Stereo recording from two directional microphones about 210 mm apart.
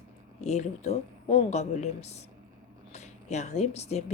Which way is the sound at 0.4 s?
30° left (ahead or behind).